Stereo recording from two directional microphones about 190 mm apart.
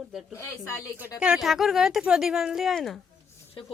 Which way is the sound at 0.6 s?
15° left (ahead or behind).